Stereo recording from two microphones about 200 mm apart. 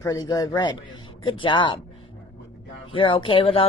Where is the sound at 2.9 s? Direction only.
25° left (ahead or behind).